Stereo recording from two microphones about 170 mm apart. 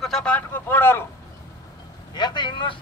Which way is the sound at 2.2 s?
25° left (ahead or behind).